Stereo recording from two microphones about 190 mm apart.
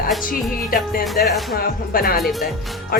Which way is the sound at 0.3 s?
50° left (ahead or behind).